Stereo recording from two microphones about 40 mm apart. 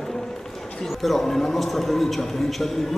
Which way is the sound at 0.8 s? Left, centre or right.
Centre.